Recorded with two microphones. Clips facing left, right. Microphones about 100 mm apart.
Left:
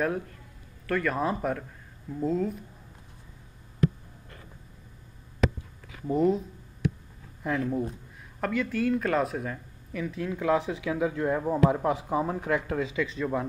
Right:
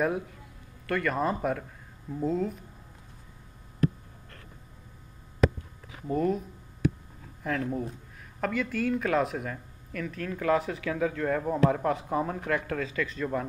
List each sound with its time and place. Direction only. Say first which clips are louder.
0.0 s speech: right 1 dB; 5° right (ahead or behind)
6.0 s speech: left 3 dB; 15° left (ahead or behind)
7.4 s speech: left 2 dB; 5° left (ahead or behind)
12.4 s speech: left 2 dB; 20° left (ahead or behind)